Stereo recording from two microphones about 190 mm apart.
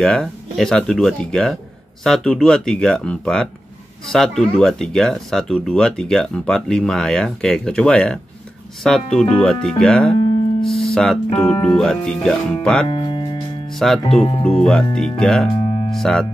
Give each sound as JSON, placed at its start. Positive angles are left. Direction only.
{"t": 0.0, "sound": "speech", "side_deg": 0}
{"t": 12.8, "sound": "music", "side_deg": 25}
{"t": 13.7, "sound": "speech", "side_deg": 0}
{"t": 14.0, "sound": "speech", "side_deg": 30}
{"t": 14.6, "sound": "speech", "side_deg": 5}